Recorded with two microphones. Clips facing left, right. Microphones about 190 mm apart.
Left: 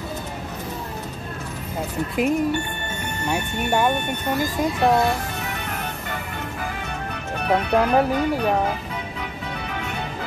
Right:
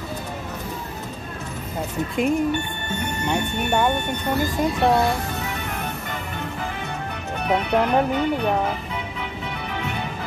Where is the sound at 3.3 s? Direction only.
5° left (ahead or behind).